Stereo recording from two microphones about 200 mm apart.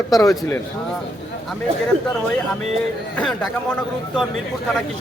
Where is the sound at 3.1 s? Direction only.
5° left (ahead or behind).